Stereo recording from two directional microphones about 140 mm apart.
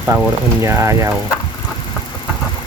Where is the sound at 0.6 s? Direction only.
20° right (ahead or behind).